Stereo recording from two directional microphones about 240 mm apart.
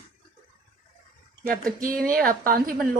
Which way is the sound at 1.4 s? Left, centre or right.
Right.